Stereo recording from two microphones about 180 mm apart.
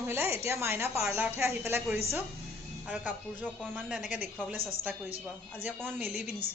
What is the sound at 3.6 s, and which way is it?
Speech, centre (ahead or behind).